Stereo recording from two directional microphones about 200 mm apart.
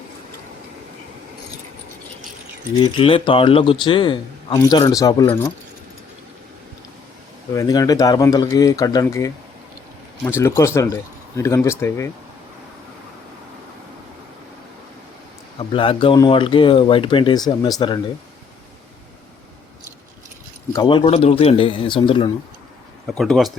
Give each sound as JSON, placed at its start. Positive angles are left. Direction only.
{"t": 2.8, "sound": "a man's voice", "side_deg": 25}
{"t": 7.5, "sound": "speech", "side_deg": 20}
{"t": 15.5, "sound": "a man's voice", "side_deg": 25}
{"t": 20.7, "sound": "a man's voice", "side_deg": 25}
{"t": 23.0, "sound": "speech", "side_deg": 0}